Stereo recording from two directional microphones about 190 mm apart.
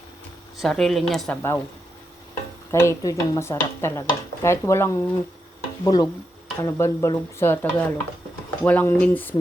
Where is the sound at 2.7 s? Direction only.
15° left (ahead or behind).